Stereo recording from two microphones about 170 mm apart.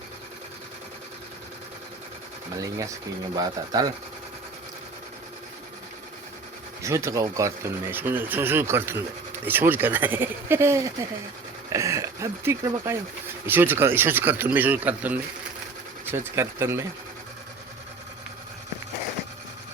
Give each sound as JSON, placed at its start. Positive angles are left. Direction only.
{"t": 2.6, "sound": "speech", "side_deg": -20}
{"t": 6.8, "sound": "speech", "side_deg": -15}